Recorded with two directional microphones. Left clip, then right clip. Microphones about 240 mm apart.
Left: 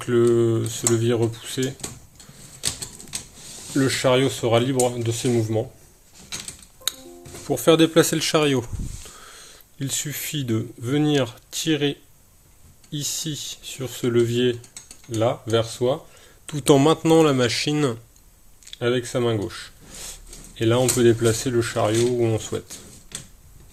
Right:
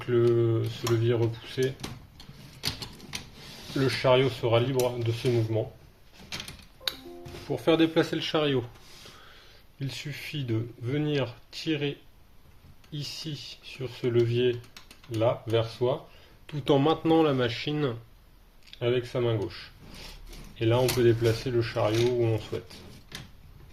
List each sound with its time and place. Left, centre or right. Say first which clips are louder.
0.0 s speech: left 5 dB; left
3.8 s speech: left 4 dB; left
7.4 s speech: left 7 dB; left